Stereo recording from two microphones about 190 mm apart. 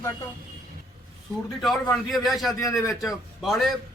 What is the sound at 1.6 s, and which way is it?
A man's voice, centre (ahead or behind).